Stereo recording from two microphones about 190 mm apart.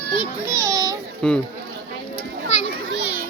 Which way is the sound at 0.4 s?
15° right (ahead or behind).